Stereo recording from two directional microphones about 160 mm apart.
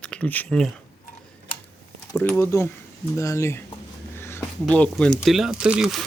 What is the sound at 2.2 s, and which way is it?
Speech, 15° left (ahead or behind).